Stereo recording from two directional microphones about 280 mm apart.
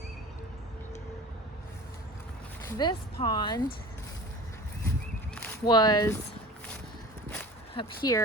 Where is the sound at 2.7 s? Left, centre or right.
Centre.